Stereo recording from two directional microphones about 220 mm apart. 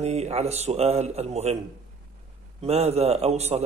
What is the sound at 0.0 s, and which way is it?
A man's voice, 30° right (ahead or behind).